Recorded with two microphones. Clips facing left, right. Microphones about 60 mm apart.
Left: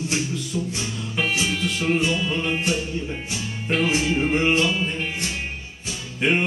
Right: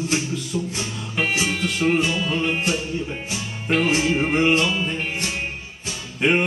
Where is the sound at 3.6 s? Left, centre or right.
Right.